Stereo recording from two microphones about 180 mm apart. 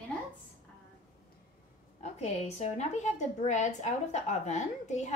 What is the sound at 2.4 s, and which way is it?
A woman's voice, 40° left (ahead or behind).